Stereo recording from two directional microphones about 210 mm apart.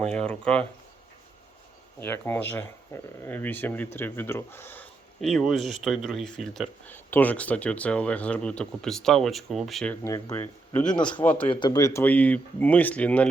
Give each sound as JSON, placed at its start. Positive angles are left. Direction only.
{"t": 0.3, "sound": "speech", "side_deg": 5}
{"t": 2.0, "sound": "speech", "side_deg": 10}
{"t": 10.9, "sound": "a man's voice", "side_deg": 20}